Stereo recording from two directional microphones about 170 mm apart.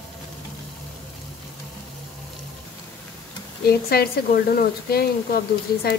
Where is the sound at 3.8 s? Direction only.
65° left (ahead or behind).